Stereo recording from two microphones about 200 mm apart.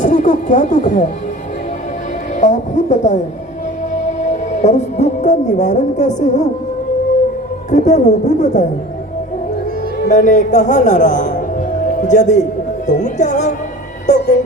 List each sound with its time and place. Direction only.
0.0 s music: 40° left (ahead or behind)
2.4 s speech: 35° left (ahead or behind)
7.7 s a woman's voice: 35° left (ahead or behind)
10.1 s a woman's voice: 40° left (ahead or behind)